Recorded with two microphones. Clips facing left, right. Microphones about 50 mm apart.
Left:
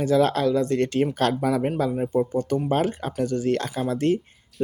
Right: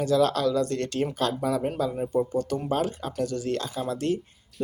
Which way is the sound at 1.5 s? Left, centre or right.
Left.